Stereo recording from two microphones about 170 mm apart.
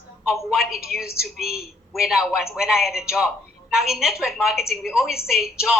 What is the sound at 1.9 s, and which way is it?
A woman's voice, centre (ahead or behind).